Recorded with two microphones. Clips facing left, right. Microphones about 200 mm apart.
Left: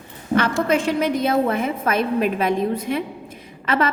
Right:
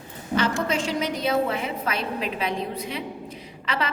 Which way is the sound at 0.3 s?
55° left (ahead or behind).